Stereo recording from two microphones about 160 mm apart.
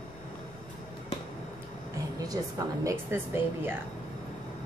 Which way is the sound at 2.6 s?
20° right (ahead or behind).